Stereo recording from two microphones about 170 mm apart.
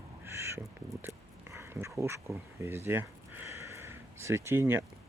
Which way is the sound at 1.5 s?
15° right (ahead or behind).